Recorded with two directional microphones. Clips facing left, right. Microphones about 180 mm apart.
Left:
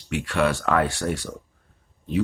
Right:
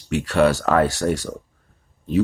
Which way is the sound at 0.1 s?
40° right (ahead or behind).